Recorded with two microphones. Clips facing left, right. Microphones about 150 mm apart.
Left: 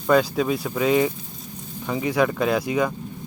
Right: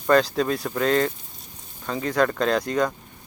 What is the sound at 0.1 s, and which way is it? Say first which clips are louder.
Speech: even; 5° left (ahead or behind).